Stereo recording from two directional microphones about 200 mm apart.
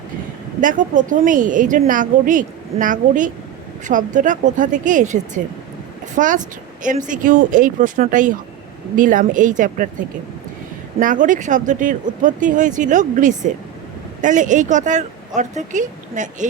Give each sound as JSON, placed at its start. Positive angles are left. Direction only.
{"t": 0.6, "sound": "a woman's voice", "side_deg": -40}
{"t": 11.0, "sound": "a woman's voice", "side_deg": -40}